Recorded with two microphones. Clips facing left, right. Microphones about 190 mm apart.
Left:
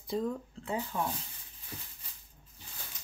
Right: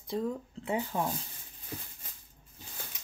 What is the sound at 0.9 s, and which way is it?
Speech, 35° right (ahead or behind).